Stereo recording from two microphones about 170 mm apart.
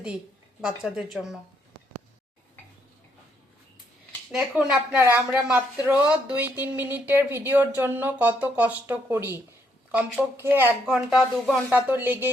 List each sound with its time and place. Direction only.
0.8 s speech: 5° right (ahead or behind)
4.3 s speech: 5° right (ahead or behind)